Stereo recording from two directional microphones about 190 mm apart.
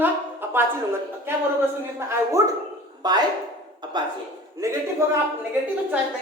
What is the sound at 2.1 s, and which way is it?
A man's voice, 15° right (ahead or behind).